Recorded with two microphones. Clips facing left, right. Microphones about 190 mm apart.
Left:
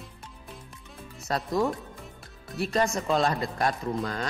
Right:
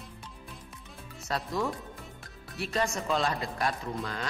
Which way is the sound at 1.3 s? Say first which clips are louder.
Left 3 dB; 45° left (ahead or behind).